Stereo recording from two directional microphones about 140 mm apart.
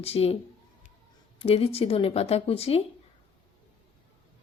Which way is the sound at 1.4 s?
40° left (ahead or behind).